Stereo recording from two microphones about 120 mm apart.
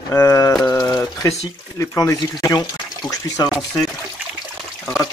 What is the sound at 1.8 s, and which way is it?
Speech, 25° left (ahead or behind).